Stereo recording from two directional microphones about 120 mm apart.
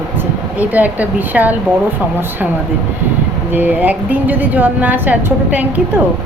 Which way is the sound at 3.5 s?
15° right (ahead or behind).